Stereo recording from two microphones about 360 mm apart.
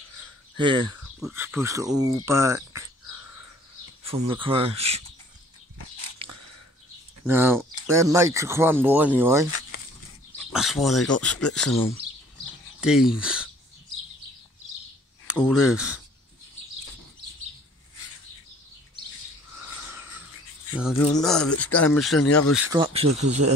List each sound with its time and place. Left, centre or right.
0.6 s speech: centre
4.0 s speech: centre
6.2 s biting: right
7.2 s speech: centre
10.5 s speech: centre
15.2 s speech: centre
19.8 s bird: centre
20.7 s speech: centre
22.2 s speech: left
22.6 s speech: centre